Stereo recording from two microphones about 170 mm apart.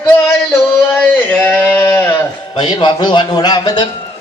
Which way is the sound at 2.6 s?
25° left (ahead or behind).